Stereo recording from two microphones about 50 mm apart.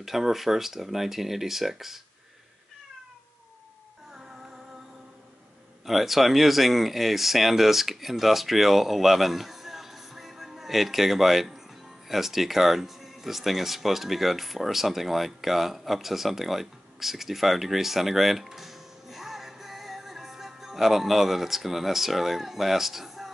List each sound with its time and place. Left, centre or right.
0.0 s speech: centre
4.1 s music: centre
5.9 s speech: centre